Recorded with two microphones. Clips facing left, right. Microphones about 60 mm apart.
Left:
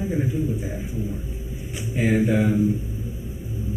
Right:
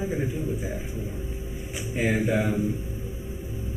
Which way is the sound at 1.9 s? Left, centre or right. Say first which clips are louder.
Left 4 dB; centre.